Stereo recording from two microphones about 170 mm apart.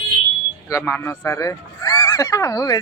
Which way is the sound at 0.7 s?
15° left (ahead or behind).